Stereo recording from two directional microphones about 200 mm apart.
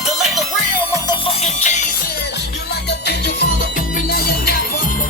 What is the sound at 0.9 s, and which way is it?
Music, 20° left (ahead or behind).